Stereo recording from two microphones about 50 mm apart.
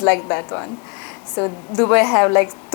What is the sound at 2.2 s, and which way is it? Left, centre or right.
Speech, left.